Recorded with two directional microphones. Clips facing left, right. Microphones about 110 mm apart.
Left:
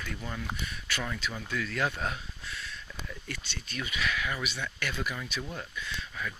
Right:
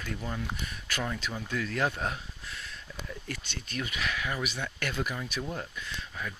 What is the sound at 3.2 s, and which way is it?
Speech, 40° right (ahead or behind).